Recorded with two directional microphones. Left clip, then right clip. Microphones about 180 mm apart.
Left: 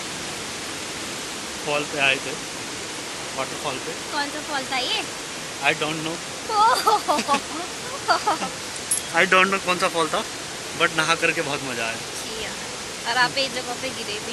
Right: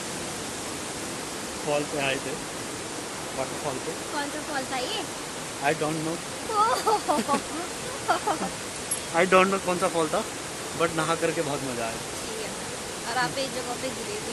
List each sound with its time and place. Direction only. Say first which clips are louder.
1.7 s speech: left 6 dB; centre (ahead or behind)
5.7 s speech: left 4 dB; 20° right (ahead or behind)
6.6 s speech: left 5 dB; 25° left (ahead or behind)
9.1 s speech: left 3 dB; 10° right (ahead or behind)
13.1 s speech: left 6 dB; 20° left (ahead or behind)